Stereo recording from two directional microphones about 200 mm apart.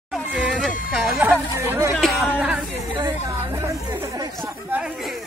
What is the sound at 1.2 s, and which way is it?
Chatter, 10° right (ahead or behind).